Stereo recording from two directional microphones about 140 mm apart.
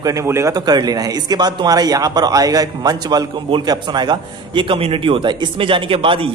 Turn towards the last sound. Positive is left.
turn(degrees=-40)  # may be behind; listen again after turning